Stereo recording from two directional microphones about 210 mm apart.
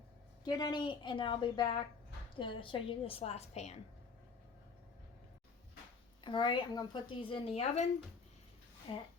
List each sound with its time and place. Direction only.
0.4 s a woman's voice: 20° left (ahead or behind)
6.2 s a woman's voice: 20° left (ahead or behind)
8.9 s a woman's voice: 25° left (ahead or behind)